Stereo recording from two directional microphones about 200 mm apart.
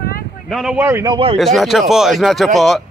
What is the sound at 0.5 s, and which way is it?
Speech, centre (ahead or behind).